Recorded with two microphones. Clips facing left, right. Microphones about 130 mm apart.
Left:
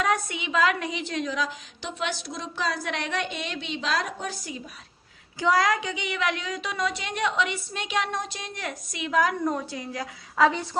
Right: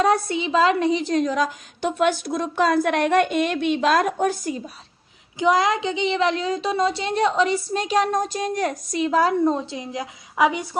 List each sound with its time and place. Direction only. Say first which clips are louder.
0.0 s a woman's voice: right 7 dB; 35° right (ahead or behind); by 4.6 s 50° right (ahead or behind)
5.4 s speech: right 4 dB; 20° right (ahead or behind)